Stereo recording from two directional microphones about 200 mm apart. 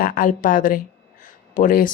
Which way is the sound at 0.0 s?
45° left (ahead or behind).